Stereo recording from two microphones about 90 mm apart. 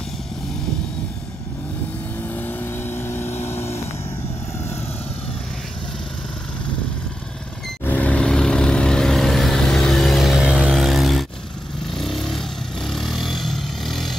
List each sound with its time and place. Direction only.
2.2 s vehicle: 20° left (ahead or behind)
7.8 s vehicle: 20° left (ahead or behind); by 10.7 s 10° right (ahead or behind)
10.7 s a sound: centre (ahead or behind)
11.9 s vehicle: centre (ahead or behind)